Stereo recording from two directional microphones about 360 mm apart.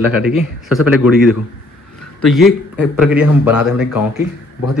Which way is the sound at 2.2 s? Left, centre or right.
Centre.